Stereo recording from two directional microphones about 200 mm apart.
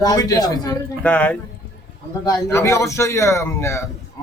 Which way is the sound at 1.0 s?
5° left (ahead or behind).